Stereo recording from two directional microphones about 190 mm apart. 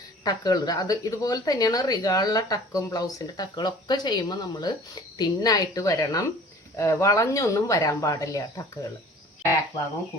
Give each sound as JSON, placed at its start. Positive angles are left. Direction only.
{"t": 0.3, "sound": "speech", "side_deg": 20}